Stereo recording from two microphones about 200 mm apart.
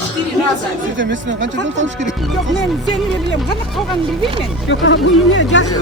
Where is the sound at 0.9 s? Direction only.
65° right (ahead or behind).